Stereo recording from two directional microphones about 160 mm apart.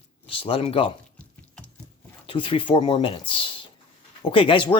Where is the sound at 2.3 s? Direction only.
35° left (ahead or behind).